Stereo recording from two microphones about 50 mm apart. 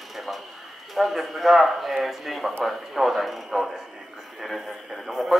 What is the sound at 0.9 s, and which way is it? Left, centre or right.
A man's voice, centre.